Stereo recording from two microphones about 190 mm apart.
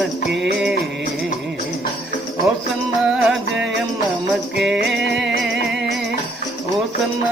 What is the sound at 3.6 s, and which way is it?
Jingle bell, centre (ahead or behind).